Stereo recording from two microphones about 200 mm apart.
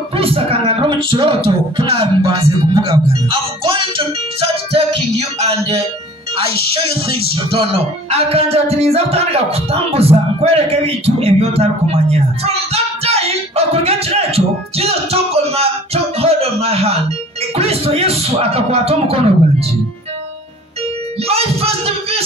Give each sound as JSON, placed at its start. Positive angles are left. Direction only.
{"t": 0.1, "sound": "speech", "side_deg": -30}
{"t": 5.4, "sound": "music", "side_deg": -30}
{"t": 6.7, "sound": "speech", "side_deg": -30}
{"t": 21.3, "sound": "music", "side_deg": -30}